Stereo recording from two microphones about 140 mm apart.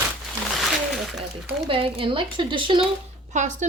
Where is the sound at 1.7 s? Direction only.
40° right (ahead or behind).